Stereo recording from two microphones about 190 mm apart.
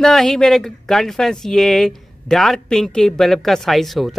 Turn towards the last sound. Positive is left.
turn(degrees=0)  # may be behind; listen again after turning